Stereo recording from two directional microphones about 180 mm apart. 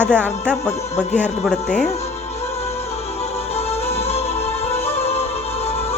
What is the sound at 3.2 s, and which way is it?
Music, 35° left (ahead or behind).